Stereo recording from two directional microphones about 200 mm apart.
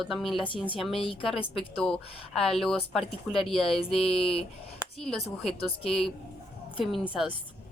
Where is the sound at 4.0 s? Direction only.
30° left (ahead or behind).